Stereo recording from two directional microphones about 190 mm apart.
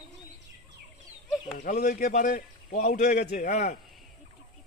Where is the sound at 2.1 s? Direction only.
40° left (ahead or behind).